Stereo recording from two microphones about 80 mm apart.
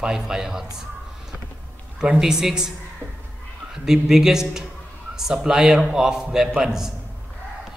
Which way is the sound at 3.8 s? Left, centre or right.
Centre.